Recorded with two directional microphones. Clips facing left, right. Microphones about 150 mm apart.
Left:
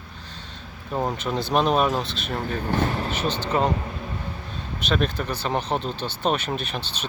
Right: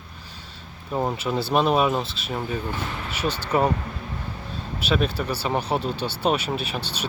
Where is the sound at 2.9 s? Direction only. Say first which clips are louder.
Left 6 dB; 35° left (ahead or behind).